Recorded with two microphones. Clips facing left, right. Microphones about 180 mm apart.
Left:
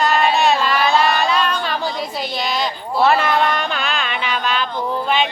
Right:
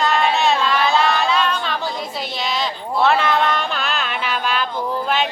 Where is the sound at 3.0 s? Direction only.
5° left (ahead or behind).